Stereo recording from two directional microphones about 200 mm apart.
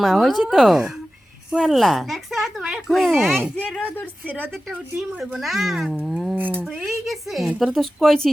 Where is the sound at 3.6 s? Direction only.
5° left (ahead or behind).